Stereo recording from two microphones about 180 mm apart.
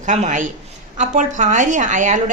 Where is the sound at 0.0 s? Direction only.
40° right (ahead or behind).